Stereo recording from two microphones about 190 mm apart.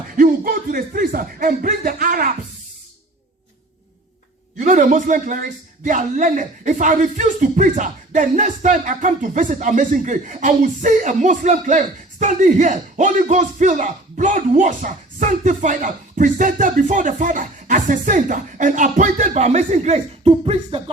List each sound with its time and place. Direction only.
0.2 s speech: 50° right (ahead or behind)
4.5 s a man's voice: 40° right (ahead or behind)